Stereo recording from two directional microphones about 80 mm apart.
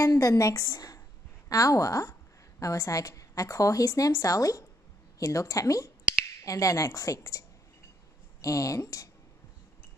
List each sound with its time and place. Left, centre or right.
0.0 s a woman's voice: left